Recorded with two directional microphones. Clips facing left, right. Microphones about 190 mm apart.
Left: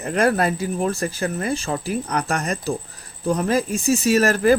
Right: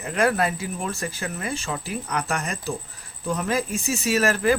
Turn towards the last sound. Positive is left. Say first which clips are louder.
# left 4 dB
turn(degrees=40)  # may be behind; listen again after turning